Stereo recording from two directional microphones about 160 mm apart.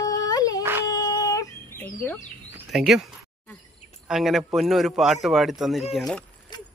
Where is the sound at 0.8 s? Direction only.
20° left (ahead or behind).